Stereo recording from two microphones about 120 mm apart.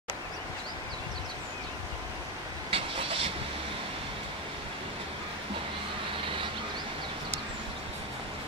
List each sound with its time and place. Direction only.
2.7 s vehicle: 50° right (ahead or behind)